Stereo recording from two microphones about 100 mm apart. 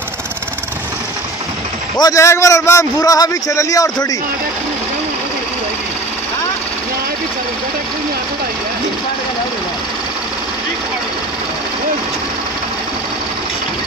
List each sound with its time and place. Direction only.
2.0 s a man's voice: 35° left (ahead or behind)